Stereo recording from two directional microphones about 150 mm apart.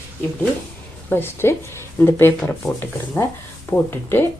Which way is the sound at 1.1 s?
15° left (ahead or behind).